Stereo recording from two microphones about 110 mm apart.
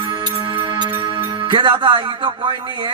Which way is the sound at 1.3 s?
50° right (ahead or behind).